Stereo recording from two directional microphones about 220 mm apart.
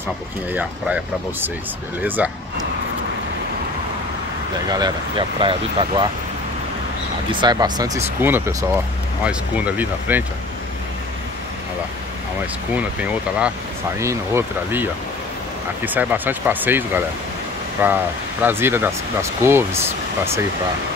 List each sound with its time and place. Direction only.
0.5 s speech: 5° right (ahead or behind)
4.6 s speech: 20° right (ahead or behind)
7.2 s speech: 20° right (ahead or behind)
12.7 s speech: 5° right (ahead or behind)